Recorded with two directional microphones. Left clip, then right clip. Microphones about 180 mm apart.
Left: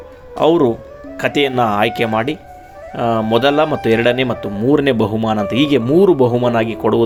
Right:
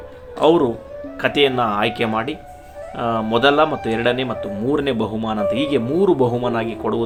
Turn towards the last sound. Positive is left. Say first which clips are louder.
# left 7 dB
turn(degrees=35)  # may be behind; listen again after turning